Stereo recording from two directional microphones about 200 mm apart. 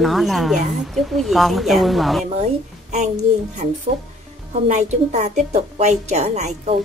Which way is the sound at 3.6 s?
40° right (ahead or behind).